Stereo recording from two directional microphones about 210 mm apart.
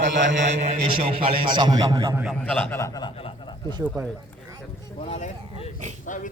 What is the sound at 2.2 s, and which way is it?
A man's voice, 5° left (ahead or behind).